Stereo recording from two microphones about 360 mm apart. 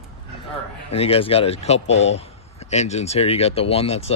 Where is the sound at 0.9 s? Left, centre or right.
Centre.